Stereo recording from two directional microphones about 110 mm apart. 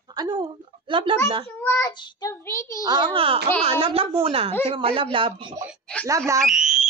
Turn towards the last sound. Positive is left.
turn(degrees=-5)  # may be behind; listen again after turning